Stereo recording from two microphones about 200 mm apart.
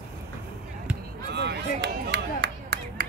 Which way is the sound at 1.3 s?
55° right (ahead or behind).